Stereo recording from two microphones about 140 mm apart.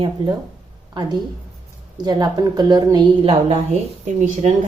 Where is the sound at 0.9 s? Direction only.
30° right (ahead or behind).